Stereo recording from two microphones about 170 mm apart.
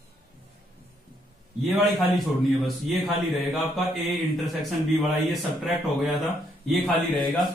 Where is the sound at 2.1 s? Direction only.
Centre (ahead or behind).